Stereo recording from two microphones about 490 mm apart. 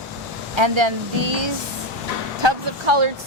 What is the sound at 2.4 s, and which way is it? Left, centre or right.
Speech, right.